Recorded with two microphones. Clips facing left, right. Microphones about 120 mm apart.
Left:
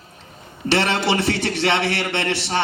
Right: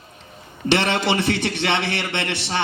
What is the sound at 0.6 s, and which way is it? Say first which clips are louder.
A man's voice: even; 20° right (ahead or behind).